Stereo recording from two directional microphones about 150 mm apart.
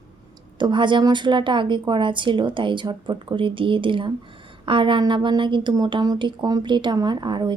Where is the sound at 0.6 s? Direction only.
30° right (ahead or behind).